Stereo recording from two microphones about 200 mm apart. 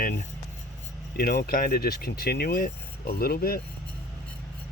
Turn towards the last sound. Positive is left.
turn(degrees=50)  # may be behind; listen again after turning